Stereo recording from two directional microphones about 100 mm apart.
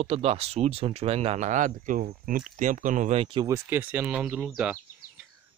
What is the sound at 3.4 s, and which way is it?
Speech, 25° right (ahead or behind).